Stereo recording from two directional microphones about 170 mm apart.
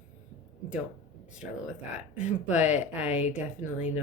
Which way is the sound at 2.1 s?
5° right (ahead or behind).